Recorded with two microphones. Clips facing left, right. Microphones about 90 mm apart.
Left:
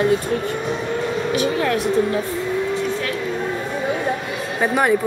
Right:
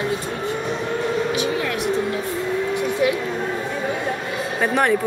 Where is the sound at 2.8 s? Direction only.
15° right (ahead or behind).